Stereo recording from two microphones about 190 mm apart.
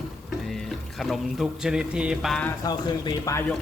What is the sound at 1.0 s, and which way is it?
Speech, centre (ahead or behind).